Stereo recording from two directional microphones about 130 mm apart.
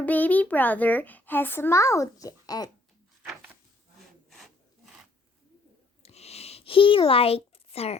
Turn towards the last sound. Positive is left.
turn(degrees=50)  # may be behind; listen again after turning